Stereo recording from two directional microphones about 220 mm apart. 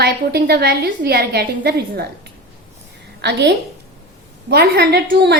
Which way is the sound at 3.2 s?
50° right (ahead or behind).